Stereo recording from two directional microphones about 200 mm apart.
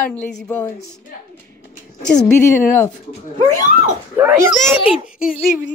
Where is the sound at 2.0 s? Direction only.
5° left (ahead or behind).